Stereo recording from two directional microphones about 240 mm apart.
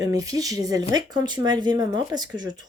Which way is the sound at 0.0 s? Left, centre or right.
Centre.